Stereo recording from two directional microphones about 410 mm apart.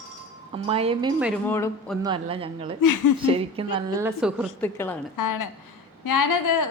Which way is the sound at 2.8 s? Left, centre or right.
Left.